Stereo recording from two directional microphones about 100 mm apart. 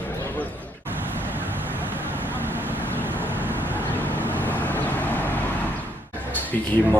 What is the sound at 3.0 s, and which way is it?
Vehicle, 20° right (ahead or behind).